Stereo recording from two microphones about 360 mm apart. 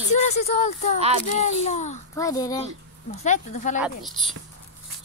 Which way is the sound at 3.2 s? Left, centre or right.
Centre.